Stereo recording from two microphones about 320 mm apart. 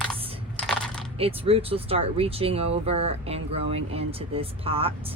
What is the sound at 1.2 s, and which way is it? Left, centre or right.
Speech, centre.